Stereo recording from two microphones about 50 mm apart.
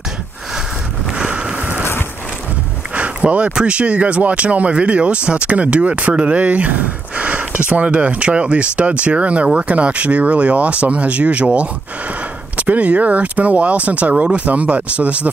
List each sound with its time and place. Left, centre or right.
1.1 s vehicle: centre
2.9 s a sound: right
3.5 s speech: right